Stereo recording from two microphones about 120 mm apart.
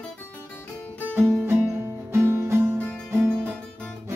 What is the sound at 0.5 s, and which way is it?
Music, 15° left (ahead or behind).